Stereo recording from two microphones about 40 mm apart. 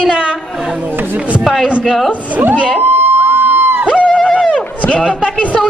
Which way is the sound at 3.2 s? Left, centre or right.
Right.